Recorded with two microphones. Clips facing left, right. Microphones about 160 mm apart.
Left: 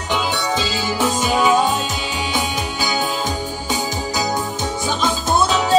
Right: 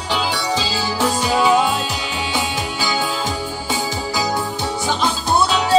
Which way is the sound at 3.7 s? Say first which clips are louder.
Even; 20° left (ahead or behind).